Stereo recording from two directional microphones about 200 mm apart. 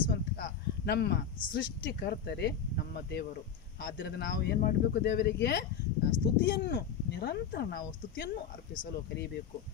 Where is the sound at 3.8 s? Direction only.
55° left (ahead or behind).